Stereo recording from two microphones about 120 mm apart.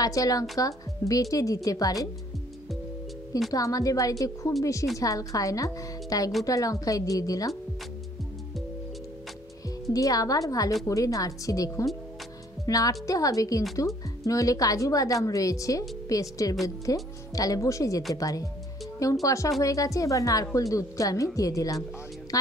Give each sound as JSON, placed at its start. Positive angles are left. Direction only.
{"t": 0.0, "sound": "a woman's voice", "side_deg": 30}
{"t": 3.5, "sound": "a woman's voice", "side_deg": 30}
{"t": 9.8, "sound": "a woman's voice", "side_deg": 30}